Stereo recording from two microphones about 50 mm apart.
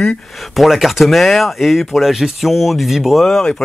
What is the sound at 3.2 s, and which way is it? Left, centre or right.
Speech, centre.